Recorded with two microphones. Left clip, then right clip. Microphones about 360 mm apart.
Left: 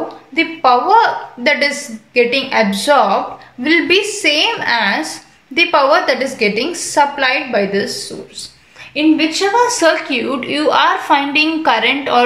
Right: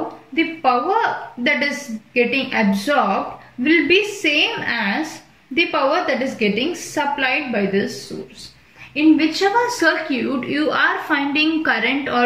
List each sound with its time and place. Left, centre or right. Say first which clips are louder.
0.6 s a woman's voice: left 8 dB; centre
8.9 s a woman's voice: left 2 dB; centre